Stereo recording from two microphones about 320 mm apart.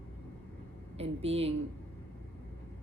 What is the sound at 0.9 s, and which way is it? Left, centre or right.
Speech, centre.